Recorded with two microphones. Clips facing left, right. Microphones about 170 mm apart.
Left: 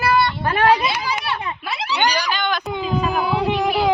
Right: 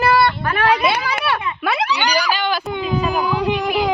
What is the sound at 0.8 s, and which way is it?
Speech, 60° right (ahead or behind).